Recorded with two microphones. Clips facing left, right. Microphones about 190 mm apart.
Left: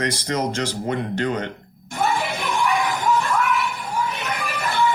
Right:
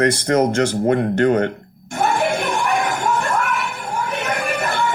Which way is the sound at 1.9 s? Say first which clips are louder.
Right 4 dB; 50° right (ahead or behind).